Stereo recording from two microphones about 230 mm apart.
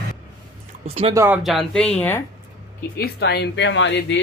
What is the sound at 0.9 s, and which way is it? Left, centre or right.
Speech, right.